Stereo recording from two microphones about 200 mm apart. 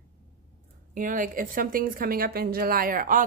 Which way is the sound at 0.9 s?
40° right (ahead or behind).